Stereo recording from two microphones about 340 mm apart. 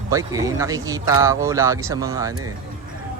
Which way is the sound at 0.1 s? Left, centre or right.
Centre.